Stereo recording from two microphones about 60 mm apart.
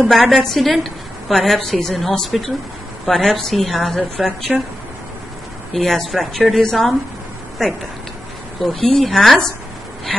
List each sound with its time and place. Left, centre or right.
0.0 s a woman's voice: centre
4.5 s speech: right
5.7 s a woman's voice: centre